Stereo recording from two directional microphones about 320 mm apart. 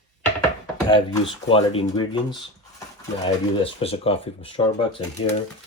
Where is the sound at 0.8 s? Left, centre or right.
Centre.